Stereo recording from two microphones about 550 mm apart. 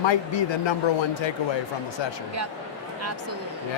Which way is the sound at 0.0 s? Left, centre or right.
Left.